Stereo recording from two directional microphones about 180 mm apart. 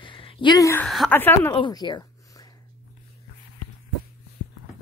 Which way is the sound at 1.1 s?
10° left (ahead or behind).